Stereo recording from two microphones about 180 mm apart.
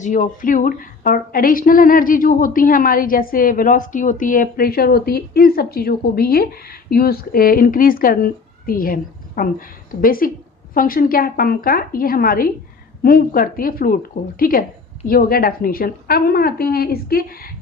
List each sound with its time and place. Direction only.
0.0 s a woman's voice: 45° left (ahead or behind)